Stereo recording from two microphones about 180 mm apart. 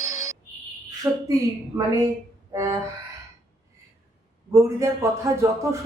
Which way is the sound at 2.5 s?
20° right (ahead or behind).